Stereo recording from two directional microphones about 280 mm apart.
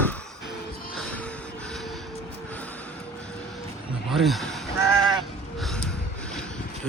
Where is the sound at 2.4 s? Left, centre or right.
Centre.